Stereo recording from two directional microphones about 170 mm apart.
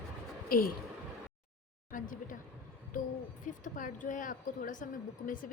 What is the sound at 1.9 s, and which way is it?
Speech, 50° left (ahead or behind).